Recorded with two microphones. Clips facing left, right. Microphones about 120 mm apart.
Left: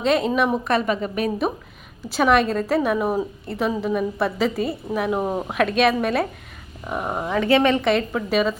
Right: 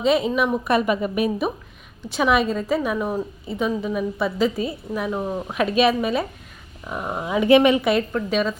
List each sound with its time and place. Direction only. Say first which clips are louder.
0.0 s a woman's voice: even; centre (ahead or behind)
0.7 s a woman's voice: right 1 dB; 10° right (ahead or behind)
2.0 s a woman's voice: left 2 dB; centre (ahead or behind)
5.2 s speech: left 2 dB; 25° left (ahead or behind)
5.5 s a woman's voice: right 1 dB; centre (ahead or behind)
7.3 s a woman's voice: right 3 dB; 15° right (ahead or behind); by 8.5 s 5° left (ahead or behind)